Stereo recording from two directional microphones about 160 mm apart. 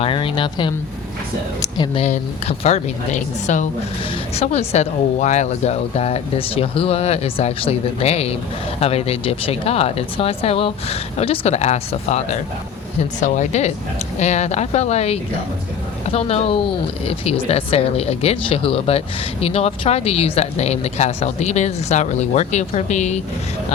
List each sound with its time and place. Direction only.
0.0 s speech: 30° left (ahead or behind)
2.0 s a woman's voice: 40° left (ahead or behind)